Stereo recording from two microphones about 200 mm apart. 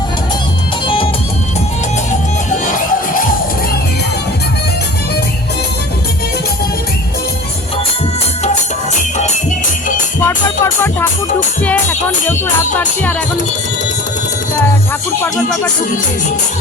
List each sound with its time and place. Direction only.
2.5 s music: 40° left (ahead or behind)
10.2 s music: 10° left (ahead or behind)
12.8 s speech: 5° left (ahead or behind)